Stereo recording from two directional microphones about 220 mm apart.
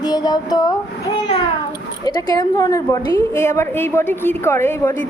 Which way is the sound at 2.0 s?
15° left (ahead or behind).